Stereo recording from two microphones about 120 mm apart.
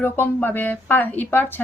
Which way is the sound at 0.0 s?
15° left (ahead or behind).